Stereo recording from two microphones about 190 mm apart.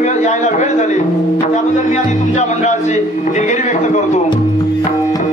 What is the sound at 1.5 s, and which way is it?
A man's voice, 40° left (ahead or behind).